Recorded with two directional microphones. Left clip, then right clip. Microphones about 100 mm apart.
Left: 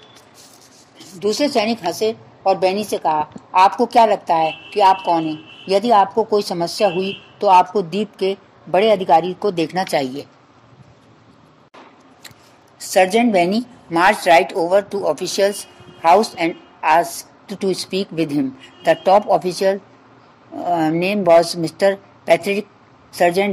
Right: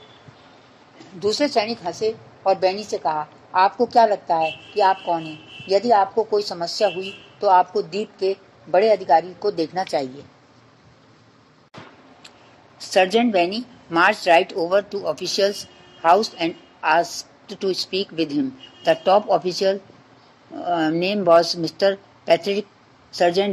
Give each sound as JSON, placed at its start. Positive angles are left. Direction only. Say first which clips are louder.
{"t": 1.2, "sound": "a woman's voice", "louder": "left 3 dB", "side_deg": 60}
{"t": 12.7, "sound": "a woman's voice", "louder": "left 3 dB", "side_deg": 45}